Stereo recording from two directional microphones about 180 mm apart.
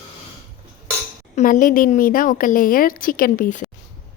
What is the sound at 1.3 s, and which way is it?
A woman's voice, 45° left (ahead or behind).